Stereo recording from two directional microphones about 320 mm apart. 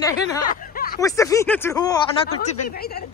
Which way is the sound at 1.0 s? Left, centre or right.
Centre.